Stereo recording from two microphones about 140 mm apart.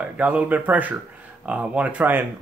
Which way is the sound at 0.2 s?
10° right (ahead or behind).